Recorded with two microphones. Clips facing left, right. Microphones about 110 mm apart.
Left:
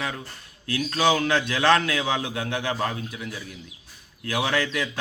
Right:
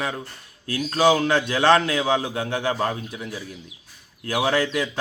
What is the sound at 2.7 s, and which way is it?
Speech, 20° right (ahead or behind).